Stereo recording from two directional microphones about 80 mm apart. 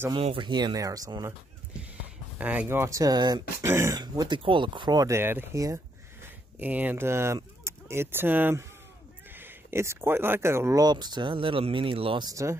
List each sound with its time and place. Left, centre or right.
0.1 s speech: right
0.7 s speech: right
2.3 s speech: right
2.8 s speech: right
3.6 s speech: right
4.0 s speech: right
4.9 s speech: right
5.2 s speech: right
6.6 s speech: right
10.8 s speech: right
12.3 s speech: right